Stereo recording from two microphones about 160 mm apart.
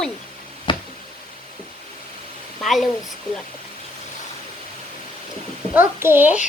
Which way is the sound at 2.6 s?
Centre (ahead or behind).